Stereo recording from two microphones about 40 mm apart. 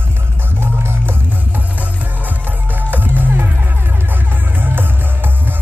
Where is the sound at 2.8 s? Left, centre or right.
Right.